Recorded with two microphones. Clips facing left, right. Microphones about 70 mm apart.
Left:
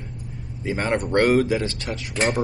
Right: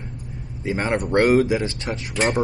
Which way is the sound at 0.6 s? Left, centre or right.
Centre.